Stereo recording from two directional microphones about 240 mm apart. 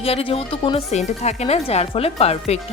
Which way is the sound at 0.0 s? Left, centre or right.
Left.